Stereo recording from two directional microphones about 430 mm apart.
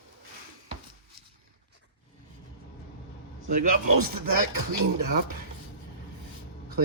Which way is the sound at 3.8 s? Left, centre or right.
Right.